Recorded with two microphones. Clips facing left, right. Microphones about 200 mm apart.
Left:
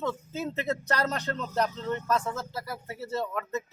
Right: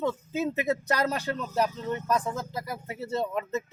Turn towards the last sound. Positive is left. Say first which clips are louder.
# right 2 dB
turn(degrees=-20)  # may be behind; listen again after turning